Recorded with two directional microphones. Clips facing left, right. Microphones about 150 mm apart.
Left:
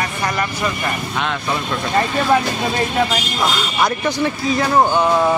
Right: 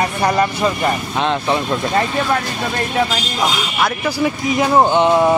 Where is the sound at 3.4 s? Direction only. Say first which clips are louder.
Right 1 dB; 15° right (ahead or behind).